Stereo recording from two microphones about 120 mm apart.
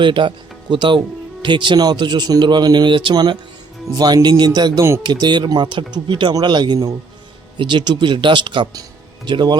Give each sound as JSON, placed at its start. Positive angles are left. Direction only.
{"t": 0.0, "sound": "speech", "side_deg": -40}